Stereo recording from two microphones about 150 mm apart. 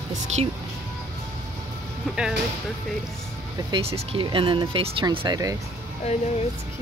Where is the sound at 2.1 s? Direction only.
5° right (ahead or behind).